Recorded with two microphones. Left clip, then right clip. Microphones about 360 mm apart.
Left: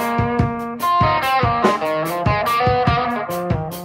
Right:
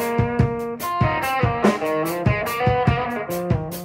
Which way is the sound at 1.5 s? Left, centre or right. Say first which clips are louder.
Left 3 dB; left.